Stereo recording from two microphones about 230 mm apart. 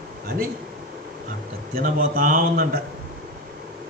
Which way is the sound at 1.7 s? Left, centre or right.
Right.